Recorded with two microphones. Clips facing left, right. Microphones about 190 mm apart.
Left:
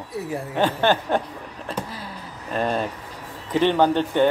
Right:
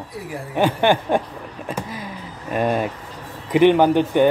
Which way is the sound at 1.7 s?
15° right (ahead or behind).